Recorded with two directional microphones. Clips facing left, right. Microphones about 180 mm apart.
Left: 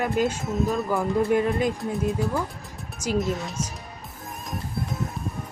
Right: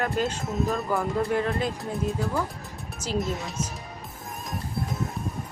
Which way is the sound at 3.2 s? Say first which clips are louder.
Left 2 dB; centre (ahead or behind).